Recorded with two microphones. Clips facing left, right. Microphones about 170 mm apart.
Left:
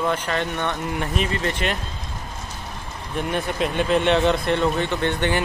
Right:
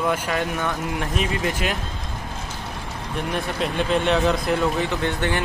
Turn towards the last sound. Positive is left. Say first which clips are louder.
# left 1 dB
turn(degrees=0)  # may be behind; listen again after turning